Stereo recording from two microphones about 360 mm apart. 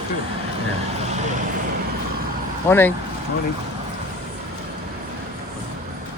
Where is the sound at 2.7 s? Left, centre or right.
Centre.